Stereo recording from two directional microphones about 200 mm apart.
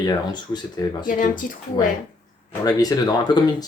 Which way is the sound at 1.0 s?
40° left (ahead or behind).